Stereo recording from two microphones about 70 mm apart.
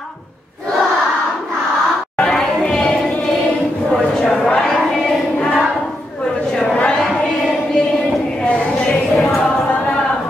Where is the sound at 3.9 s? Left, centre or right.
Centre.